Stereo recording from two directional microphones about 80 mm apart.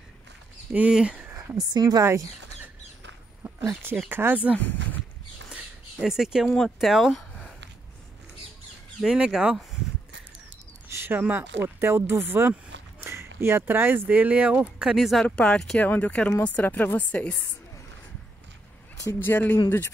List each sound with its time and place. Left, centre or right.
0.7 s speech: centre
1.6 s a woman's voice: right
4.1 s speech: right
4.6 s speech: left
5.9 s speech: centre
7.2 s a sound: centre
9.0 s speech: centre
10.9 s speech: right; by 15.2 s centre
15.2 s speech: centre
15.8 s speech: centre
19.1 s speech: left